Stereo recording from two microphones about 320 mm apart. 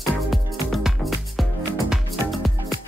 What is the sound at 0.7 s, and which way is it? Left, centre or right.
Music, centre.